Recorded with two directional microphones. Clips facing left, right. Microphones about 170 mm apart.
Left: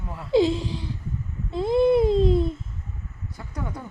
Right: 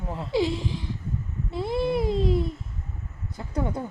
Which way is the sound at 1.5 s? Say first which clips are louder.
Left 7 dB; 20° left (ahead or behind).